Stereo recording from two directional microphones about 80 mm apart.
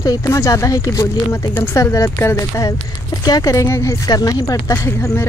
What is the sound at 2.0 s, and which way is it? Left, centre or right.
Speech, left.